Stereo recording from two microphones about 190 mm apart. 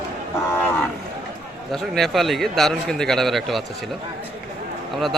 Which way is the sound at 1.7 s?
Centre (ahead or behind).